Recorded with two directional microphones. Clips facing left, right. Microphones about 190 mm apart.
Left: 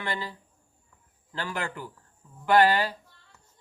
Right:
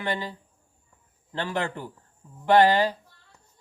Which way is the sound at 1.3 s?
25° right (ahead or behind).